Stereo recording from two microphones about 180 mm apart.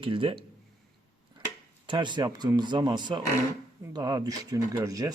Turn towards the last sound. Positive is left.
turn(degrees=-20)  # may be behind; listen again after turning